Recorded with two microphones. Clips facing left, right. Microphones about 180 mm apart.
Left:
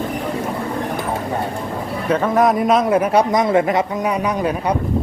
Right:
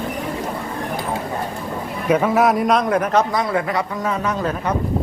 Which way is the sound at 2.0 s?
10° right (ahead or behind).